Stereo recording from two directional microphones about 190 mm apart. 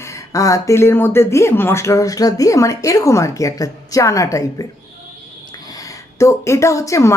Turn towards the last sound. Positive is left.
turn(degrees=15)  # may be behind; listen again after turning